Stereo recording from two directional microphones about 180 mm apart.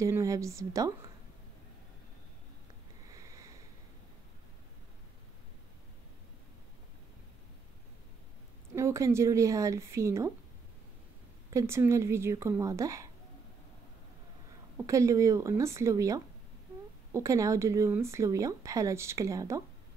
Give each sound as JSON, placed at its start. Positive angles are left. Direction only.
{"t": 0.0, "sound": "speech", "side_deg": -15}
{"t": 3.2, "sound": "sniff", "side_deg": -20}
{"t": 8.7, "sound": "speech", "side_deg": -15}
{"t": 11.5, "sound": "speech", "side_deg": -15}
{"t": 14.9, "sound": "speech", "side_deg": -15}